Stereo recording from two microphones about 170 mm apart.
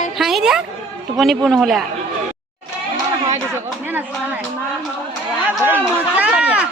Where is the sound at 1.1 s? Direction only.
Centre (ahead or behind).